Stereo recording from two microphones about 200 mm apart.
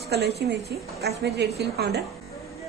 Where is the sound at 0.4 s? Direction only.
55° right (ahead or behind).